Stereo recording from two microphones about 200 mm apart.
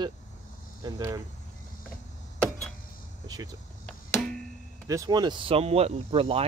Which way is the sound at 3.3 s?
15° right (ahead or behind).